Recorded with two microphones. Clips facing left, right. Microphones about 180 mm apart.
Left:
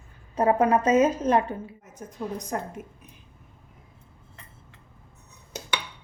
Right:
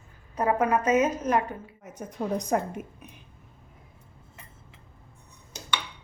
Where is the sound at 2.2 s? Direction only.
55° right (ahead or behind).